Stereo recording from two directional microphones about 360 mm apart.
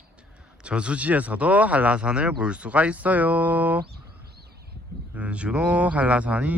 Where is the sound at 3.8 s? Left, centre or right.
Right.